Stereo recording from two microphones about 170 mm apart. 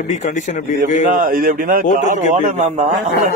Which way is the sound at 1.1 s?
55° right (ahead or behind).